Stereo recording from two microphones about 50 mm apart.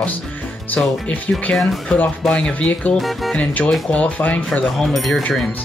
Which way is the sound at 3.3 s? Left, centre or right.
Left.